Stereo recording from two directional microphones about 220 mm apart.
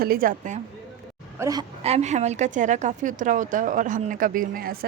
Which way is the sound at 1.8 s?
30° right (ahead or behind).